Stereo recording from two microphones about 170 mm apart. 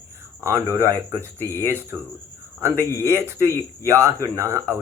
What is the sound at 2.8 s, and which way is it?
Speech, 15° left (ahead or behind).